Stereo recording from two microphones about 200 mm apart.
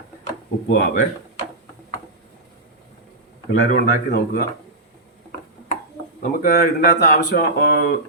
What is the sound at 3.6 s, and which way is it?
Speech, 45° left (ahead or behind).